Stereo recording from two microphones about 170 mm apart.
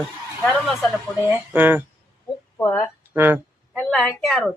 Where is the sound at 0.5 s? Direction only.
Centre (ahead or behind).